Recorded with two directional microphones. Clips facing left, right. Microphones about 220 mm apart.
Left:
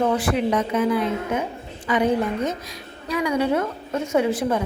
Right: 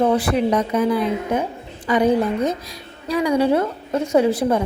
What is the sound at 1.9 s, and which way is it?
Speech, 35° right (ahead or behind).